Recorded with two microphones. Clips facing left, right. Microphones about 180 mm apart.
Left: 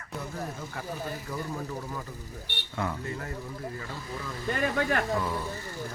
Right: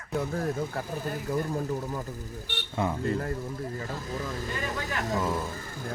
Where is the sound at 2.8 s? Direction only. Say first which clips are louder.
Right 3 dB; 20° right (ahead or behind).